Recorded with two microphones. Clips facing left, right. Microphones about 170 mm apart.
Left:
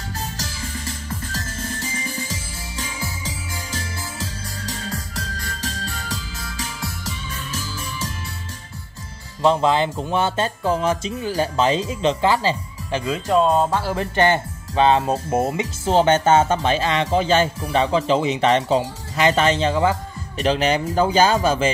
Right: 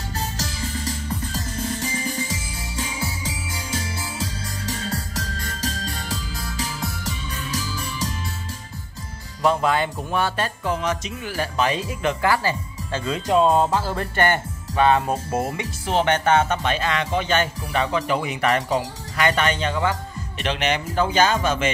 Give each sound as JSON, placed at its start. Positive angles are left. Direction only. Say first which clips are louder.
{"t": 9.4, "sound": "speech", "louder": "left 3 dB", "side_deg": 25}
{"t": 13.0, "sound": "music", "louder": "even", "side_deg": 0}
{"t": 13.9, "sound": "speech", "louder": "left 3 dB", "side_deg": 20}